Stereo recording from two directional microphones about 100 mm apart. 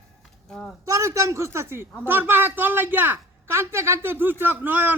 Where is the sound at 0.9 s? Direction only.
30° right (ahead or behind).